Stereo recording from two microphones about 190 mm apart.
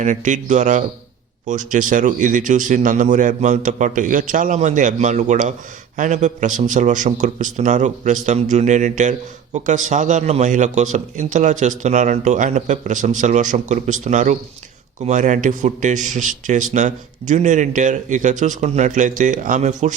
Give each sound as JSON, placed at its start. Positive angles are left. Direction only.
{"t": 0.0, "sound": "a man's voice", "side_deg": -40}